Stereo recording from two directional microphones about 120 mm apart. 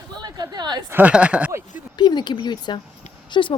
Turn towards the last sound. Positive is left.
turn(degrees=45)  # may be behind; listen again after turning